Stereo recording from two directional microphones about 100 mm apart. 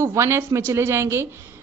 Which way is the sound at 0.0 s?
25° right (ahead or behind).